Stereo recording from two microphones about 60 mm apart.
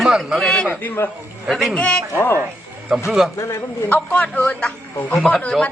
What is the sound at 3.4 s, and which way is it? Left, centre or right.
Speech, left.